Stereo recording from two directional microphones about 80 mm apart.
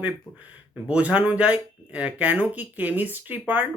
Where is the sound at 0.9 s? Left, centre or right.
Centre.